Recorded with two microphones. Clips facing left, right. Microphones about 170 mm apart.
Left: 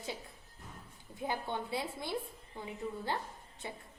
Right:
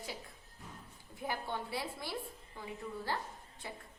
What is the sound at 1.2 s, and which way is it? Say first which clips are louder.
A woman's voice: left 2 dB; 20° left (ahead or behind).